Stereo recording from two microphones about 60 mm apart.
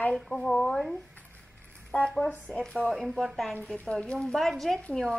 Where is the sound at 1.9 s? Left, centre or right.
Left; by 3.3 s centre.